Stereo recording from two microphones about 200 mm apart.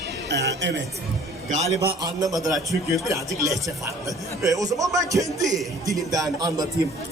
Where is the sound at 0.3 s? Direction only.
60° right (ahead or behind).